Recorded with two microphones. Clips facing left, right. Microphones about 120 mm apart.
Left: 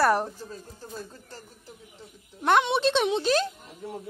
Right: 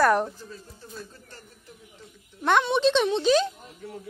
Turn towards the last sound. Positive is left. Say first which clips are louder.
# right 2 dB
turn(degrees=5)  # may be behind; listen again after turning